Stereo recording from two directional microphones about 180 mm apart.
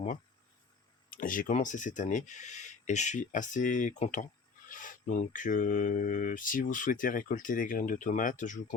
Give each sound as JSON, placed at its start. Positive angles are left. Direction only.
{"t": 1.1, "sound": "speech", "side_deg": 50}